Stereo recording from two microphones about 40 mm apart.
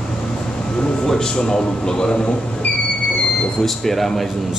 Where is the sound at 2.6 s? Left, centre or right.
Left.